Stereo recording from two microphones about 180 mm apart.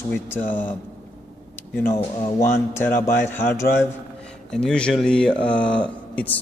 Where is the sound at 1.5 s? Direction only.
15° left (ahead or behind).